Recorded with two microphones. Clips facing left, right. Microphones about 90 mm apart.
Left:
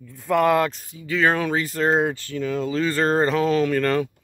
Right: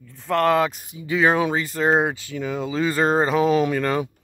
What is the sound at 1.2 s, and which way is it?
Speech, 5° right (ahead or behind).